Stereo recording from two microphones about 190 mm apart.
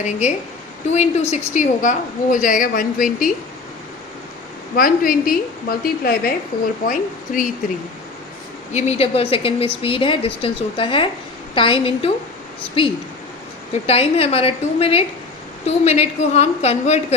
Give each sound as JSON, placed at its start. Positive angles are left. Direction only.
{"t": 0.0, "sound": "a woman's voice", "side_deg": 40}
{"t": 4.8, "sound": "a woman's voice", "side_deg": 45}
{"t": 8.7, "sound": "a woman's voice", "side_deg": 35}